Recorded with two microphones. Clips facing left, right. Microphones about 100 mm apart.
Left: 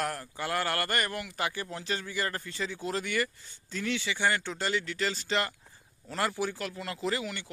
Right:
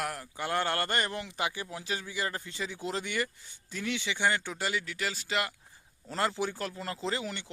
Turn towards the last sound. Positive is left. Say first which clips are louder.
# left 2 dB
turn(degrees=-25)  # may be behind; listen again after turning